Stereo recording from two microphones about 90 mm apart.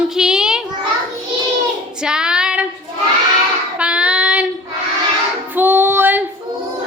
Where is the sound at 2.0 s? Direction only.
10° right (ahead or behind).